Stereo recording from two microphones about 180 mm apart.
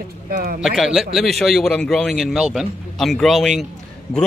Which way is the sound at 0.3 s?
55° right (ahead or behind).